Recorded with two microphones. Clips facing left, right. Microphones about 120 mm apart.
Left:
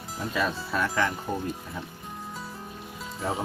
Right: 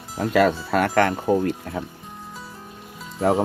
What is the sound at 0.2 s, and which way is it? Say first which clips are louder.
Speech: right 10 dB; 80° right.